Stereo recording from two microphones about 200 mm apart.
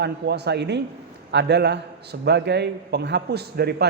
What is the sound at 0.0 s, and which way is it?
A man's voice, 55° right (ahead or behind).